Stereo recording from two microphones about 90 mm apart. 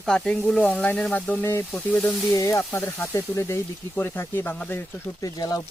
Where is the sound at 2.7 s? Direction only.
25° left (ahead or behind).